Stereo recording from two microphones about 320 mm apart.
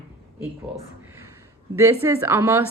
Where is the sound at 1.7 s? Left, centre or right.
Centre.